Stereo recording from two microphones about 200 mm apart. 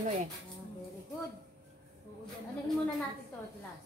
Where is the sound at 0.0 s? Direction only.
40° right (ahead or behind).